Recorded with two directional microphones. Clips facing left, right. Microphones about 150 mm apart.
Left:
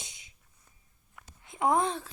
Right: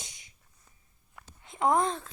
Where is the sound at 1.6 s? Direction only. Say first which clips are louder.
Right 1 dB; 20° left (ahead or behind).